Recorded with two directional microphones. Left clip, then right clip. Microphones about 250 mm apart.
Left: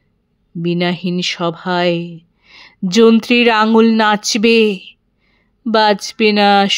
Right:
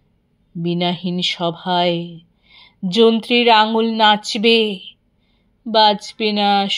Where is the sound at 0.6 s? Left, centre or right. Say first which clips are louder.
Left 3 dB; left.